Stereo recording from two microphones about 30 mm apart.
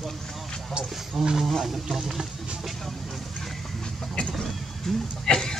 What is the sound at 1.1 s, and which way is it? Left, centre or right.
Speech, centre.